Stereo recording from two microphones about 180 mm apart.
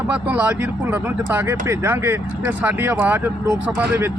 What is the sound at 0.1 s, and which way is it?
Speech, 10° right (ahead or behind).